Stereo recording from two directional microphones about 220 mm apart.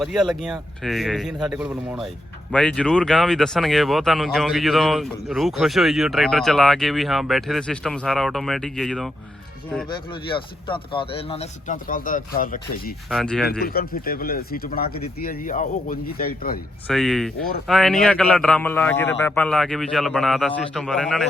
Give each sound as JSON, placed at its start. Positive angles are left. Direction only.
{"t": 0.0, "sound": "speech", "side_deg": 0}
{"t": 10.2, "sound": "speech", "side_deg": 20}
{"t": 13.1, "sound": "speech", "side_deg": 0}
{"t": 13.5, "sound": "speech", "side_deg": 45}
{"t": 16.9, "sound": "speech", "side_deg": 0}